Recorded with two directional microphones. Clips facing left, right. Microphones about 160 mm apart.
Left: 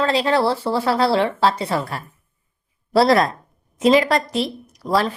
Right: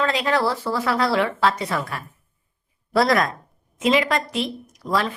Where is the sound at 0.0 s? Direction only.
30° left (ahead or behind).